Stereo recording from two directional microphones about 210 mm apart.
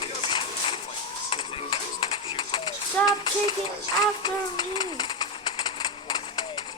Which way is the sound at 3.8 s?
20° left (ahead or behind).